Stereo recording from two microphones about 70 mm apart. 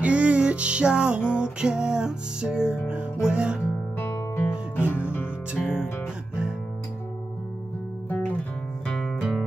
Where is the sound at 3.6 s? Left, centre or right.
Left.